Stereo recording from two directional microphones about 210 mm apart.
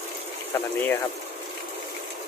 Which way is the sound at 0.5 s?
10° left (ahead or behind).